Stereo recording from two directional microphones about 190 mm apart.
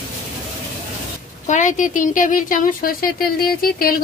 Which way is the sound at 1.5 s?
40° left (ahead or behind).